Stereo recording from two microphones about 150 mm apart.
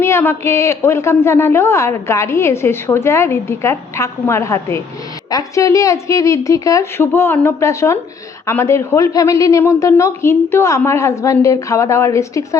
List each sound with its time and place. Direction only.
0.0 s a man's voice: 15° left (ahead or behind)